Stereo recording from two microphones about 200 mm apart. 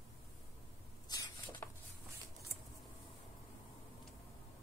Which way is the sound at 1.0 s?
20° left (ahead or behind).